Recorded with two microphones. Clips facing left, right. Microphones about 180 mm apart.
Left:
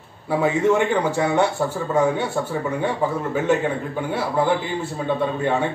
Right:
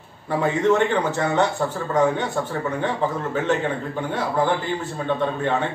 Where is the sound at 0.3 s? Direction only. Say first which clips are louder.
Left 1 dB; 10° left (ahead or behind).